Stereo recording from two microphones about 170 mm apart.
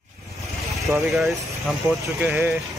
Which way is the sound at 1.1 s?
Centre (ahead or behind).